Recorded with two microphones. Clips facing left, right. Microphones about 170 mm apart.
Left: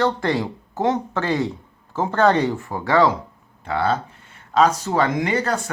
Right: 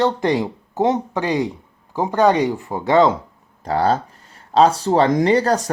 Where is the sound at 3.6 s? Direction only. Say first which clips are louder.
Right 3 dB; 40° right (ahead or behind).